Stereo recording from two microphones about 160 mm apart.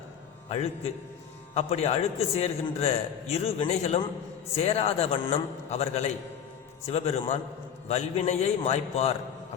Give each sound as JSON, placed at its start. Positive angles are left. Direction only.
{"t": 1.5, "sound": "a man's voice", "side_deg": 40}